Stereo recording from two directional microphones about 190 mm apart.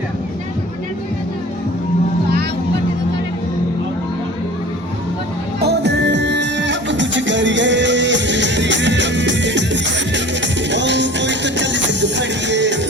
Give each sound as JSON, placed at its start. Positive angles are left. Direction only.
{"t": 5.6, "sound": "music", "side_deg": -65}